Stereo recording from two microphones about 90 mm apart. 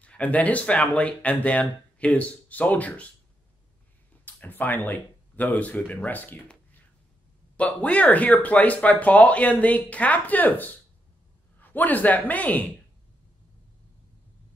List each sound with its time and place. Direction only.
0.0 s speech: 15° left (ahead or behind)
4.2 s a man's voice: 20° left (ahead or behind)